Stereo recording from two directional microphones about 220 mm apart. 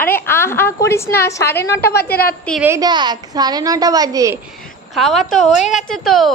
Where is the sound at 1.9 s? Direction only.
45° left (ahead or behind).